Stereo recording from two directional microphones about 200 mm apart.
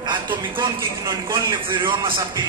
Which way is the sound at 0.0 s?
20° right (ahead or behind).